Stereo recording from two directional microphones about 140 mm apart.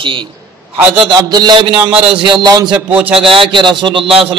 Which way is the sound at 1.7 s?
10° right (ahead or behind).